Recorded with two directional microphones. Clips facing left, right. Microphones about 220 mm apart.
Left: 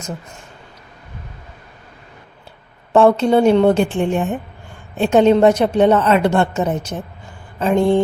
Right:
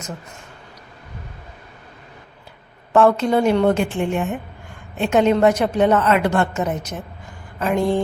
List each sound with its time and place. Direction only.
2.9 s a woman's voice: 30° left (ahead or behind)